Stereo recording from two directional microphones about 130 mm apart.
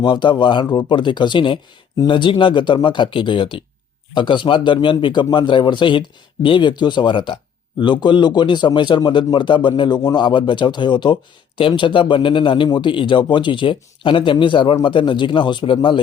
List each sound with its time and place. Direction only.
0.0 s speech: 35° left (ahead or behind)